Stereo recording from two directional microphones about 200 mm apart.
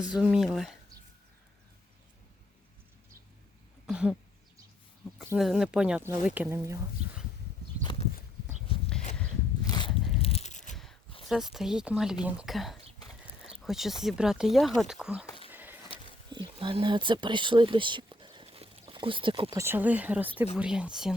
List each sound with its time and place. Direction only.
0.1 s speech: 5° right (ahead or behind)
3.8 s speech: 5° right (ahead or behind)
5.1 s speech: 5° right (ahead or behind)
9.6 s biting: 20° left (ahead or behind)
10.2 s a sound: 30° left (ahead or behind)
11.3 s speech: centre (ahead or behind)
15.4 s a sound: 10° right (ahead or behind)
16.3 s speech: 25° right (ahead or behind); by 21.1 s 5° right (ahead or behind)